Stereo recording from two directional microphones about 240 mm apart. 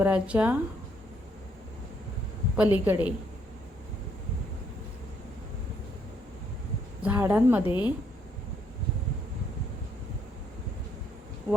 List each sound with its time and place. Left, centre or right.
0.0 s speech: centre
2.6 s speech: centre
7.0 s speech: centre
7.6 s a woman's voice: centre
11.5 s speech: centre